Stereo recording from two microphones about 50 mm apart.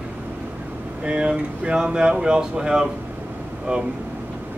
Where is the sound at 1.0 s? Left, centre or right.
Right.